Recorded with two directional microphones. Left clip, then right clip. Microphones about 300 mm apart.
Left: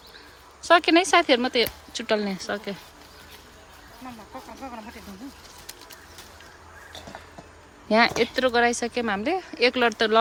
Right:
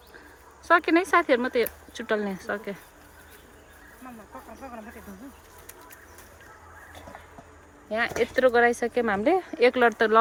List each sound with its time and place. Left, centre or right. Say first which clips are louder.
0.7 s speech: left 3 dB; centre
4.6 s speech: left 3 dB; left
7.9 s speech: left 6 dB; centre